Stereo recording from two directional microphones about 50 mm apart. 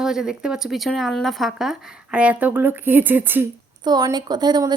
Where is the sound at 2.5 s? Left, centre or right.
Right.